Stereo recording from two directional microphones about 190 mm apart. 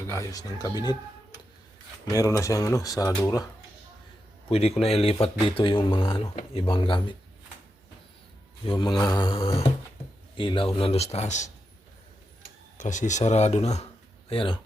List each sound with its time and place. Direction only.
0.1 s speech: 15° left (ahead or behind)
2.0 s speech: 20° left (ahead or behind)
4.4 s speech: 30° left (ahead or behind)
8.6 s speech: 25° left (ahead or behind)
12.7 s speech: 40° left (ahead or behind)